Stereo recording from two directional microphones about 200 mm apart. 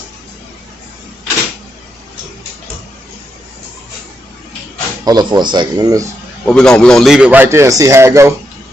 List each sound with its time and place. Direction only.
5.0 s speech: 20° right (ahead or behind)
6.4 s a man's voice: 5° left (ahead or behind); by 8.3 s 15° right (ahead or behind)